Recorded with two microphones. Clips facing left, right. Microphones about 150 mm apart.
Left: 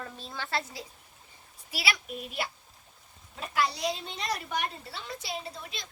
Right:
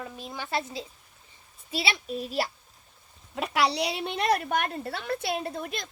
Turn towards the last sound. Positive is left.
turn(degrees=-55)  # may be behind; listen again after turning